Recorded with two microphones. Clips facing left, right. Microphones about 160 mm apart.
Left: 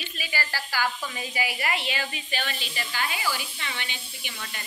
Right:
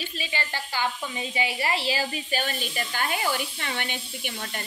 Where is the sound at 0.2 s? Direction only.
20° right (ahead or behind).